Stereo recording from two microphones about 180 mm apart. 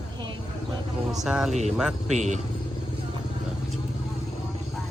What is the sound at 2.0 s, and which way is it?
Speech, 40° right (ahead or behind).